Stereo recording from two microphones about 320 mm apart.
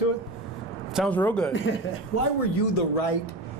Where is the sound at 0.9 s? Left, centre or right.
Centre.